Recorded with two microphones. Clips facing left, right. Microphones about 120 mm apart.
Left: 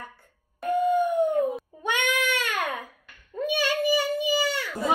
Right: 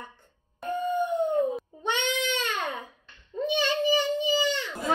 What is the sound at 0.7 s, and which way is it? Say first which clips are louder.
Howl: left 5 dB; 10° left (ahead or behind).